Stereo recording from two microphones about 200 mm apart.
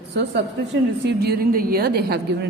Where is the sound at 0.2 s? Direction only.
60° right (ahead or behind).